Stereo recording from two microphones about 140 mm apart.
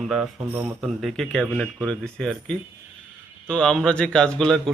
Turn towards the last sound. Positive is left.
turn(degrees=5)  # may be behind; listen again after turning